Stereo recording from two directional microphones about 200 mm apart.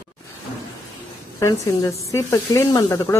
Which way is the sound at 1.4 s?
15° left (ahead or behind).